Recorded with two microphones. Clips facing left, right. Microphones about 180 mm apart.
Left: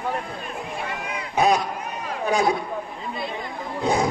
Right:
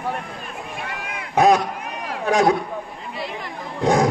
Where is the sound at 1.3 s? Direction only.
80° right.